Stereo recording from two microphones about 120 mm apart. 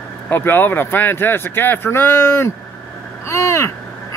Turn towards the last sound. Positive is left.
turn(degrees=25)  # may be behind; listen again after turning